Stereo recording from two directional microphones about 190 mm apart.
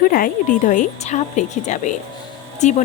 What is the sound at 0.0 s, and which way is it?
A woman's voice, 50° left (ahead or behind).